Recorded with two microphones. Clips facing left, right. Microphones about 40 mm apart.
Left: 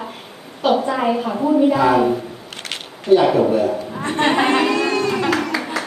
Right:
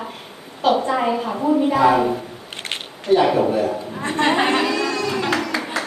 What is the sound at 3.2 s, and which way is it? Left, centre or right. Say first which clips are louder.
Speech: left 1 dB; centre.